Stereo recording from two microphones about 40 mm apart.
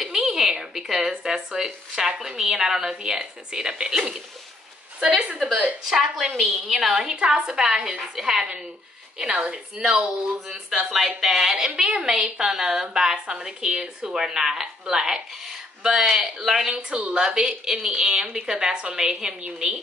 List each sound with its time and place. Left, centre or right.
0.0 s a sound: centre
1.2 s a woman's voice: centre
5.9 s a woman's voice: centre
9.2 s a woman's voice: right
9.8 s a woman's voice: centre
10.9 s a woman's voice: centre
11.7 s a woman's voice: right
14.1 s speech: centre
16.7 s a woman's voice: right
19.4 s a woman's voice: right